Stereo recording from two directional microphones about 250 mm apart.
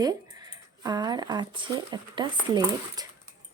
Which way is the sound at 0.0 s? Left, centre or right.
Centre.